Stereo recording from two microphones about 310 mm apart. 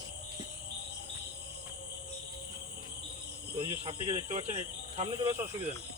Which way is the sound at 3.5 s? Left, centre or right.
Centre.